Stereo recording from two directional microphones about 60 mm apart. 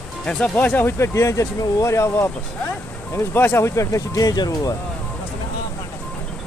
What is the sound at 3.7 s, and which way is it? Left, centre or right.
Speech, left.